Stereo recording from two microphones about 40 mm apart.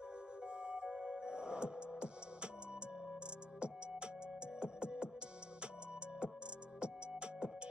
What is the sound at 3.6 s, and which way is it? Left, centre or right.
Music, right.